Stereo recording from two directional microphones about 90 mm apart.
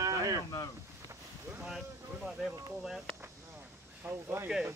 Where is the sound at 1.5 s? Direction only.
5° right (ahead or behind).